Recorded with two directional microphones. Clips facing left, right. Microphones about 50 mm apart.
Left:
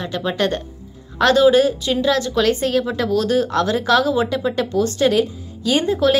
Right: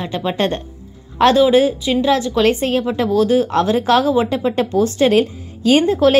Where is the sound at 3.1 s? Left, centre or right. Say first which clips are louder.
Right 4 dB; centre.